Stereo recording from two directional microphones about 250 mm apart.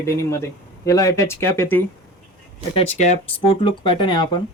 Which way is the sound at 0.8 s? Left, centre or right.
Centre.